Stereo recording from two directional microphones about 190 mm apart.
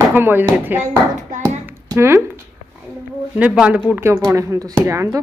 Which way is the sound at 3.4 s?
5° right (ahead or behind).